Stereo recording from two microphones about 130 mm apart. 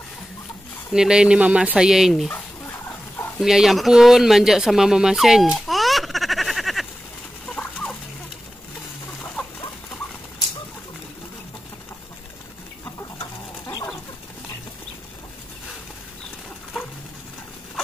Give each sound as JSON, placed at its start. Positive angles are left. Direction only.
{"t": 0.9, "sound": "speech", "side_deg": -5}
{"t": 3.3, "sound": "speech", "side_deg": -5}
{"t": 7.4, "sound": "fowl", "side_deg": 10}
{"t": 13.2, "sound": "bird", "side_deg": 35}